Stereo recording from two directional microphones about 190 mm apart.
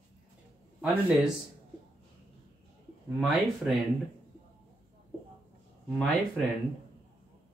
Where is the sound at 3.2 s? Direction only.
Centre (ahead or behind).